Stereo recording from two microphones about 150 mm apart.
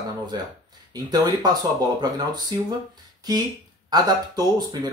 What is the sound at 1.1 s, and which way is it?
Speech, 25° right (ahead or behind).